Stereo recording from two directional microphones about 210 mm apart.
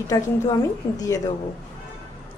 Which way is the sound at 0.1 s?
15° left (ahead or behind).